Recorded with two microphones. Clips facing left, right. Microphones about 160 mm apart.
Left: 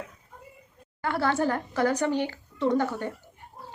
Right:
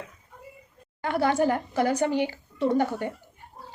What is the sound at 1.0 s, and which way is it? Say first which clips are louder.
A child's voice: right 2 dB; 15° right (ahead or behind).